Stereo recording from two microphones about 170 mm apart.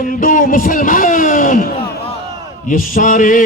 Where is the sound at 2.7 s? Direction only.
55° left (ahead or behind).